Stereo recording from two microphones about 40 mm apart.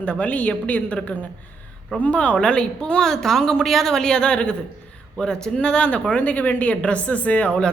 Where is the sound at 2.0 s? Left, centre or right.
Left.